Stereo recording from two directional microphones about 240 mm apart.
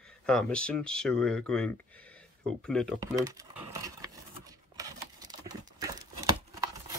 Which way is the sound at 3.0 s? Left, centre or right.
Centre.